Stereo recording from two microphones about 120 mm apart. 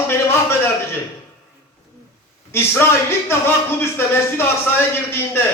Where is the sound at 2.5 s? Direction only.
20° left (ahead or behind).